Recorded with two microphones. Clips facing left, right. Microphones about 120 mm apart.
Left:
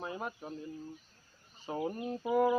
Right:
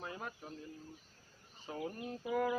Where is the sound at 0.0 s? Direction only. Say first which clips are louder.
Left 6 dB; 15° left (ahead or behind).